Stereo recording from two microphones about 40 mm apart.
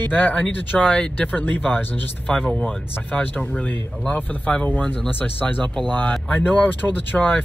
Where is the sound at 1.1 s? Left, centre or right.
Left.